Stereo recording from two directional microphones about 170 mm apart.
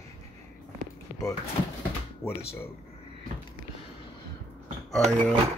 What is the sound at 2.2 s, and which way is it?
Speech, 15° left (ahead or behind).